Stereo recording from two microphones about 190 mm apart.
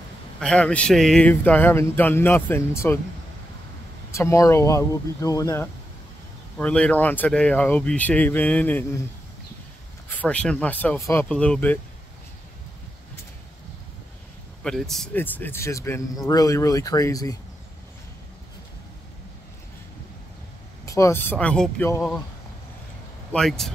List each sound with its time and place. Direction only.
0.4 s speech: 5° left (ahead or behind)
4.1 s speech: 15° left (ahead or behind)
6.6 s speech: 5° left (ahead or behind)
10.0 s speech: 5° left (ahead or behind)
14.6 s speech: centre (ahead or behind); by 17.4 s 20° left (ahead or behind)
20.8 s speech: 15° left (ahead or behind)
23.3 s speech: centre (ahead or behind)